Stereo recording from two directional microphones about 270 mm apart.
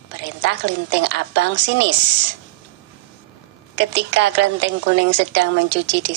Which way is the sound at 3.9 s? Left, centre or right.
Right.